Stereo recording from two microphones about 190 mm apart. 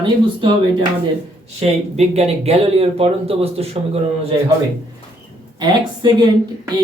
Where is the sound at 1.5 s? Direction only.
35° right (ahead or behind).